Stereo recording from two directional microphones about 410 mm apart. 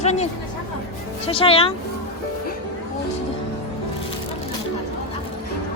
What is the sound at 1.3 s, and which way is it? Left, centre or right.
Speech, centre.